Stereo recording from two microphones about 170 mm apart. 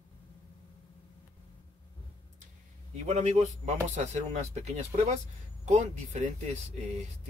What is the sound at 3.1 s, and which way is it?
Speech, 40° right (ahead or behind).